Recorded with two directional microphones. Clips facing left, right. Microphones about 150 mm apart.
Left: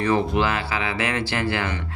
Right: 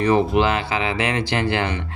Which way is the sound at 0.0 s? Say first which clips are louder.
Right 4 dB; 20° right (ahead or behind).